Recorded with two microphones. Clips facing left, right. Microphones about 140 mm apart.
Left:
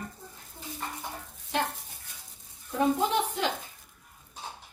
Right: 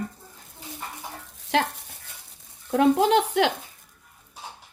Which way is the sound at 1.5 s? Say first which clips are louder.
Right 6 dB; 90° right.